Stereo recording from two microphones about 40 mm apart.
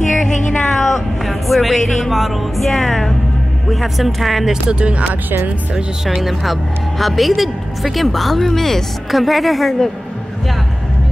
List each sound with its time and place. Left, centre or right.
0.2 s a sound: centre
2.0 s a woman's voice: centre
4.6 s speech: right
6.0 s a woman's voice: centre